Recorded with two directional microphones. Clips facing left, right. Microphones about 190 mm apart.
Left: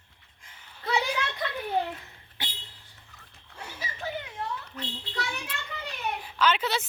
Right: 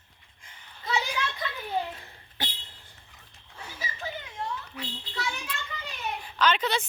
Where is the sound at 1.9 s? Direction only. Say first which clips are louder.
Right 4 dB; 30° right (ahead or behind).